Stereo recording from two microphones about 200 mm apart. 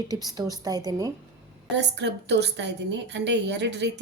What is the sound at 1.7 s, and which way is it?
A woman's voice, 60° right (ahead or behind).